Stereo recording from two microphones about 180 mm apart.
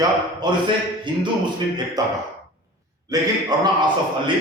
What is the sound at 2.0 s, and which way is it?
Speech, 20° right (ahead or behind).